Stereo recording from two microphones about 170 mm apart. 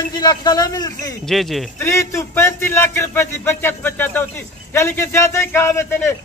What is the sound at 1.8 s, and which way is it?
A man's voice, 15° left (ahead or behind).